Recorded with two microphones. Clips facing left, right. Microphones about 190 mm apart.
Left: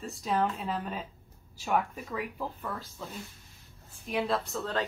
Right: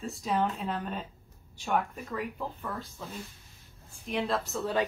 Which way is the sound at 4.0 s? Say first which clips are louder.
Left 1 dB; centre (ahead or behind).